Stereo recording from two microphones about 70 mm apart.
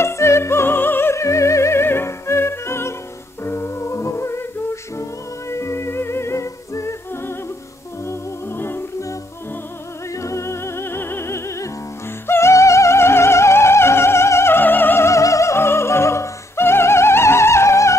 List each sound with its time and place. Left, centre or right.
0.0 s music: left
10.1 s music: left
12.3 s opera: left
15.0 s opera: left